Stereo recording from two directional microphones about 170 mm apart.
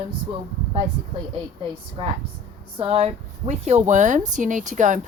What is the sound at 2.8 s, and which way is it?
A woman's voice, 35° right (ahead or behind).